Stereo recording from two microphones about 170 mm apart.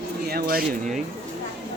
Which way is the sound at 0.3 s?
65° right (ahead or behind).